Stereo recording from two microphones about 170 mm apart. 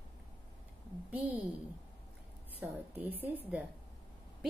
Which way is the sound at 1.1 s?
10° right (ahead or behind).